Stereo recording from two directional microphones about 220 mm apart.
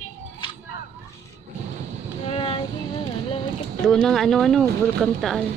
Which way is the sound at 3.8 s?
Centre (ahead or behind).